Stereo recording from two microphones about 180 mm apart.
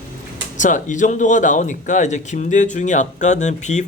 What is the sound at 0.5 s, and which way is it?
Speech, 45° left (ahead or behind).